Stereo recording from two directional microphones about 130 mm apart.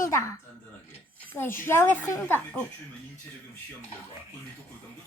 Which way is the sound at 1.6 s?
20° left (ahead or behind).